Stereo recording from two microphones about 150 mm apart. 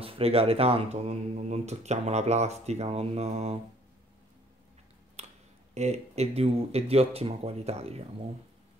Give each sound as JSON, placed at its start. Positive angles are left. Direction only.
{"t": 0.0, "sound": "speech", "side_deg": -40}
{"t": 5.8, "sound": "speech", "side_deg": -45}